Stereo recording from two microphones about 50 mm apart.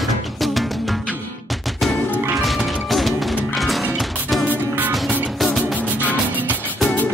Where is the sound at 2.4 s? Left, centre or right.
Centre.